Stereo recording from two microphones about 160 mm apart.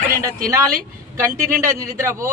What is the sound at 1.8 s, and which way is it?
Speech, 15° right (ahead or behind).